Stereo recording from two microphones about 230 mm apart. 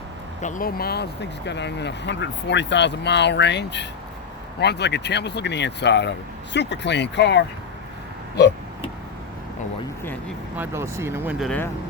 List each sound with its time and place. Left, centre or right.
0.4 s speech: left
10.0 s speech: centre
10.6 s speech: centre